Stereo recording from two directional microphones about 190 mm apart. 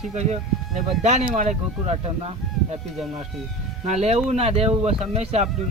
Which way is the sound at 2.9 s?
Centre (ahead or behind).